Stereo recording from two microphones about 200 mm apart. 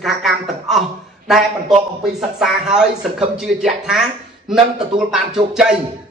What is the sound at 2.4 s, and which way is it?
Speech, centre (ahead or behind).